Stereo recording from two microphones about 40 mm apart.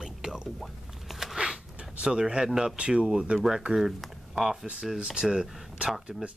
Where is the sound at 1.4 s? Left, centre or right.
Right.